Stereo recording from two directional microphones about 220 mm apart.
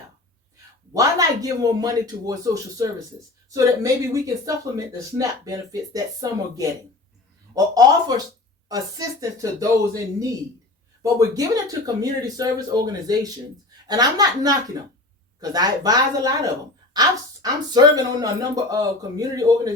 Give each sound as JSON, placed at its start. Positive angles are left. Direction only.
{"t": 0.9, "sound": "speech", "side_deg": -15}
{"t": 4.7, "sound": "speech", "side_deg": -15}